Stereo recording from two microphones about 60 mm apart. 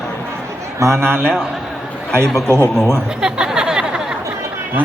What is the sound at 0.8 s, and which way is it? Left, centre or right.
Speech, right.